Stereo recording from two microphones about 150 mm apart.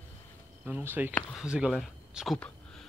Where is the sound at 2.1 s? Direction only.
5° right (ahead or behind).